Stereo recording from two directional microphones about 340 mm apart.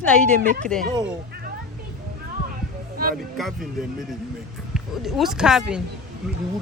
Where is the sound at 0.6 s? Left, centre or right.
Centre.